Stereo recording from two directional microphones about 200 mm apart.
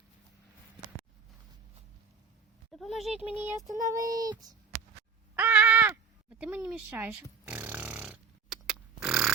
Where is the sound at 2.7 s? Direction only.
Centre (ahead or behind).